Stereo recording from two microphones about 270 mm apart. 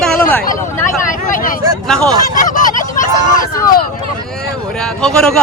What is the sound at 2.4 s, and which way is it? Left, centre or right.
Fowl, left.